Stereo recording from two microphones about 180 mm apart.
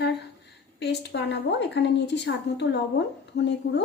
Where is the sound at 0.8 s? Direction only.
70° left (ahead or behind).